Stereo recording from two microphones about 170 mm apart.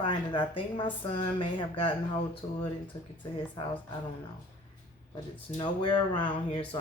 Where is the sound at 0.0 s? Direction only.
30° left (ahead or behind).